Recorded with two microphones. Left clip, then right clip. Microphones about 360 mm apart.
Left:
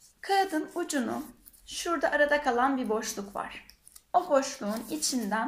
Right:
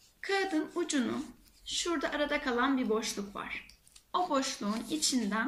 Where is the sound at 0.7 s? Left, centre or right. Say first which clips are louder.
Left 2 dB; centre.